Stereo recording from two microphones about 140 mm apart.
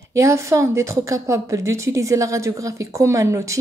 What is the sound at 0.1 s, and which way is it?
A woman's voice, 20° right (ahead or behind).